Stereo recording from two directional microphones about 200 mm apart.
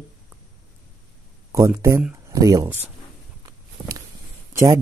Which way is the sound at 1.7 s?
15° right (ahead or behind).